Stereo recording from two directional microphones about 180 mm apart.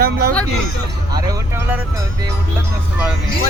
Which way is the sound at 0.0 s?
55° right (ahead or behind).